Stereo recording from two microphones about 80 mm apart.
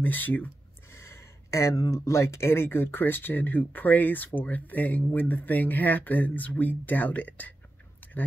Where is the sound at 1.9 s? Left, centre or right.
Left.